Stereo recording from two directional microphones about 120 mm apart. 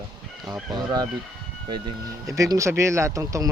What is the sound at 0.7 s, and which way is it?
Speech, 35° right (ahead or behind).